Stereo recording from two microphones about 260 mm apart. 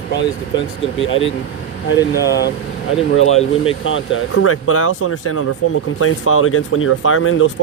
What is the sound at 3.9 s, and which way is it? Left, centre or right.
Speech, left.